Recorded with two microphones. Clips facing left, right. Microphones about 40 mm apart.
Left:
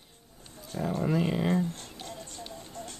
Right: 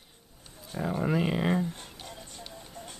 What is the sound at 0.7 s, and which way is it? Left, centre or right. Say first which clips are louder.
Speech: even; centre.